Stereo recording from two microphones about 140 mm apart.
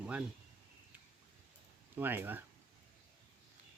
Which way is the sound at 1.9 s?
15° right (ahead or behind).